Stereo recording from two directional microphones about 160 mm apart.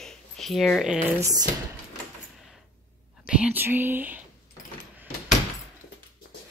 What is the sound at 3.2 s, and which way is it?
Speech, 10° right (ahead or behind).